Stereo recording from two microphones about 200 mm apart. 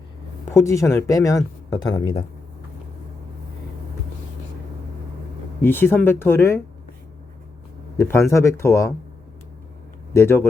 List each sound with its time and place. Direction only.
0.5 s speech: 15° left (ahead or behind)
5.6 s speech: 10° left (ahead or behind)
7.9 s speech: 10° left (ahead or behind)
10.2 s speech: 10° left (ahead or behind)